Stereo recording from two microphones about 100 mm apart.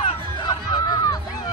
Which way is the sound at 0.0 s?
50° left (ahead or behind).